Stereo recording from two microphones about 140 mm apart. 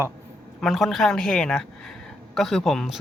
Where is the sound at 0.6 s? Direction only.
Centre (ahead or behind).